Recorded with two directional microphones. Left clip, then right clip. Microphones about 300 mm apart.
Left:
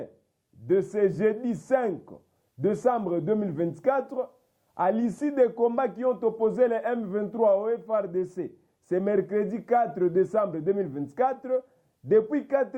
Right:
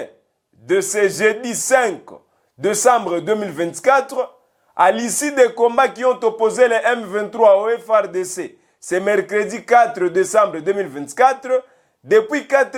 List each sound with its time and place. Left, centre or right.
0.7 s a man's voice: centre